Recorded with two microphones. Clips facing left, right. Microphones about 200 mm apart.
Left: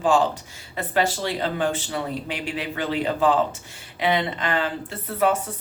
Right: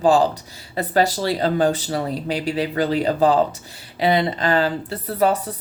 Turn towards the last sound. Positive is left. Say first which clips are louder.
# right 3 dB
turn(degrees=-35)  # may be behind; listen again after turning